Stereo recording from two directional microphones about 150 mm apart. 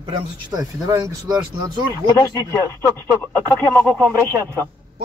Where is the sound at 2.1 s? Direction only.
25° left (ahead or behind).